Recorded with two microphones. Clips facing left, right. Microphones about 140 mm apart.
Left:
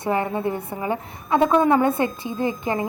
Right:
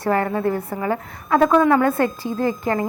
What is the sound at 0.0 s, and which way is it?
A woman's voice, 20° left (ahead or behind).